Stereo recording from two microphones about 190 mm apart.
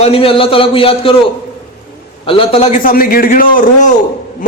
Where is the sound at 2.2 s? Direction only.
30° left (ahead or behind).